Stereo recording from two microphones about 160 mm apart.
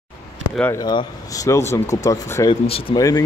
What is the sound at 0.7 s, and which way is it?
Speech, 25° left (ahead or behind).